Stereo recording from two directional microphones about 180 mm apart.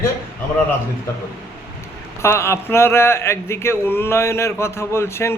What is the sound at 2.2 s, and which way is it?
Speech, 15° left (ahead or behind).